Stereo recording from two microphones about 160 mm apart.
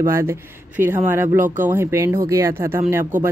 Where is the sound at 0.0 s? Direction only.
15° right (ahead or behind).